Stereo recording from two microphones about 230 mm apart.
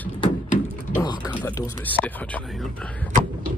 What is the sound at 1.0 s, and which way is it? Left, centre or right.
Speech, centre.